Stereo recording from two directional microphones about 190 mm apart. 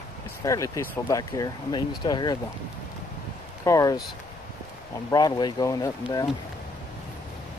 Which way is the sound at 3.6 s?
15° left (ahead or behind).